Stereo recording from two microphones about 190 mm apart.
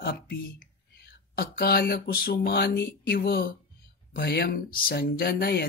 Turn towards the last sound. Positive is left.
turn(degrees=55)  # may be behind; listen again after turning